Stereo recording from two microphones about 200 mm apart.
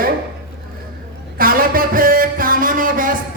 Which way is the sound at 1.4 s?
45° right (ahead or behind).